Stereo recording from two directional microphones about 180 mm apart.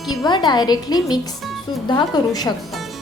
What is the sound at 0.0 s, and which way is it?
Music, centre (ahead or behind).